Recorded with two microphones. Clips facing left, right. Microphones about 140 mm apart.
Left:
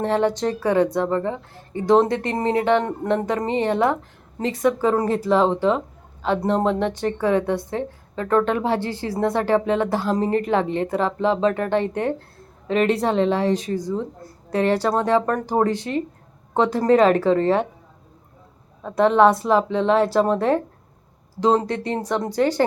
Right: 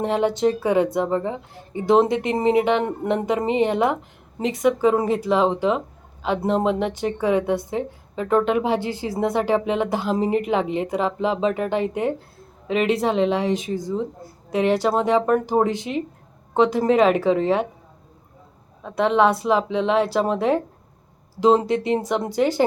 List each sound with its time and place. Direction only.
0.0 s a woman's voice: 5° right (ahead or behind)
4.6 s a woman's voice: 5° right (ahead or behind)
7.2 s speech: 20° right (ahead or behind)
7.4 s a woman's voice: 5° right (ahead or behind)
14.8 s a woman's voice: 5° right (ahead or behind)
18.8 s a woman's voice: centre (ahead or behind)
21.4 s a woman's voice: 20° right (ahead or behind)